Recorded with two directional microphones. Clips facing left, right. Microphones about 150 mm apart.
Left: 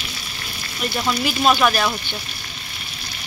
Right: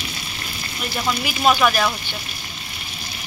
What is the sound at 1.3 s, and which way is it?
Speech, 5° right (ahead or behind).